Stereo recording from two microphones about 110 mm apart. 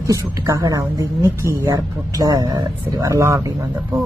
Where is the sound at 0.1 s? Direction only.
30° right (ahead or behind).